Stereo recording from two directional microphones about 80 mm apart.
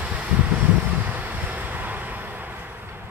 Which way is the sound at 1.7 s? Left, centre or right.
Right.